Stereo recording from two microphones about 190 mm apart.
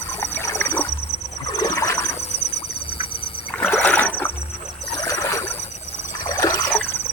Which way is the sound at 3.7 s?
5° left (ahead or behind).